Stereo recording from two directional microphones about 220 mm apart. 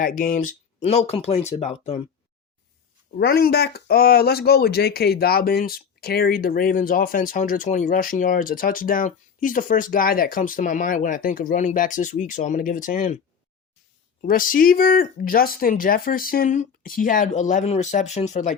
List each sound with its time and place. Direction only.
0.0 s speech: 40° left (ahead or behind)
3.2 s speech: 45° left (ahead or behind)
14.2 s speech: 40° left (ahead or behind)